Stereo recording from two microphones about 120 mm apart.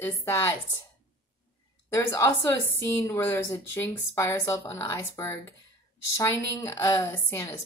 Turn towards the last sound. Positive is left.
turn(degrees=20)  # may be behind; listen again after turning